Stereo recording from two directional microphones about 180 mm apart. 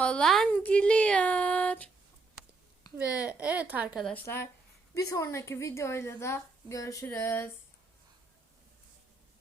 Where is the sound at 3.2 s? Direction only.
10° right (ahead or behind).